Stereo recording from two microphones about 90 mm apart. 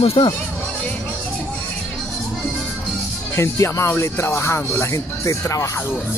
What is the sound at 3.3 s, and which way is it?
Speech, 30° left (ahead or behind).